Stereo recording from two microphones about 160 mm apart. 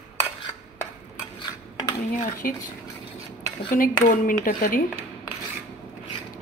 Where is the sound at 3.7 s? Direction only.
60° left (ahead or behind).